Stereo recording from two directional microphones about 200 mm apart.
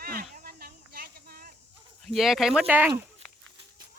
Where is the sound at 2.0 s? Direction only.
Centre (ahead or behind).